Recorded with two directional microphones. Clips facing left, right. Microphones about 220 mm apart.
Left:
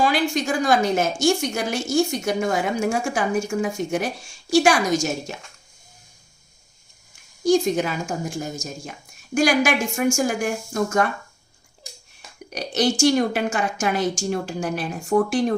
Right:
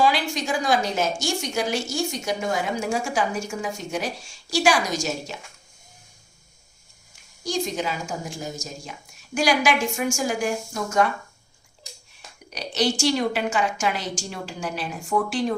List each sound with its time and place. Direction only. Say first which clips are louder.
0.0 s a woman's voice: left 2 dB; 50° left (ahead or behind)
7.4 s a woman's voice: left 8 dB; 55° left (ahead or behind)
12.5 s a woman's voice: left 3 dB; 50° left (ahead or behind)